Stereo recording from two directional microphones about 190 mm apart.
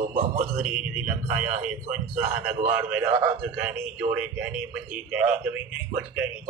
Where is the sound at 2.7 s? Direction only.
10° right (ahead or behind).